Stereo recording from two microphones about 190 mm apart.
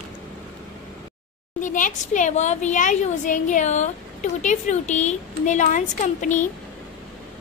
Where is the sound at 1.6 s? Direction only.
40° left (ahead or behind).